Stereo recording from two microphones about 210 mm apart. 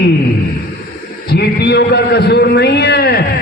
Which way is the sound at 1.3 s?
50° left (ahead or behind).